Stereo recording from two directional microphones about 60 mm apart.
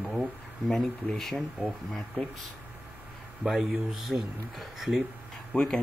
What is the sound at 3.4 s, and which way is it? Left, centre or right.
Speech, centre.